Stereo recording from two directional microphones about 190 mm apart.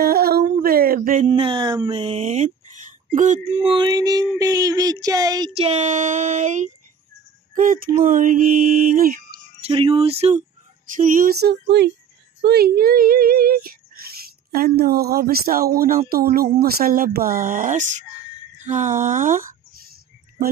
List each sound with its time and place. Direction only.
0.0 s a sound: 55° right (ahead or behind)
1.3 s speech: 25° right (ahead or behind)
5.6 s speech: 35° right (ahead or behind)
9.6 s speech: 30° right (ahead or behind)
11.0 s female singing: 45° right (ahead or behind); by 11.9 s 60° right (ahead or behind)
12.4 s speech: 55° right (ahead or behind)